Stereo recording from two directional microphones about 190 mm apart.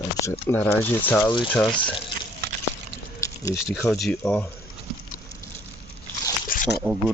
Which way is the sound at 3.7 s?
Centre (ahead or behind).